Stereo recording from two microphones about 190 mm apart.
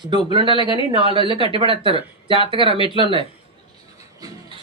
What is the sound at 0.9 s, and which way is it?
Speech, 25° right (ahead or behind).